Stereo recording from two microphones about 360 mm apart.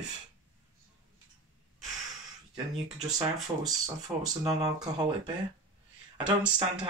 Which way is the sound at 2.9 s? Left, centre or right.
Centre.